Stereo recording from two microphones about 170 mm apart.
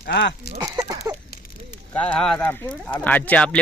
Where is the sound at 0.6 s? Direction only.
20° right (ahead or behind).